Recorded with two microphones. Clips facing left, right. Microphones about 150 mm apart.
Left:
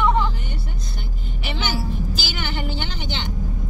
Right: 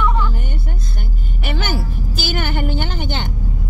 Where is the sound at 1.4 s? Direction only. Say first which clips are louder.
Right 3 dB; 50° right (ahead or behind).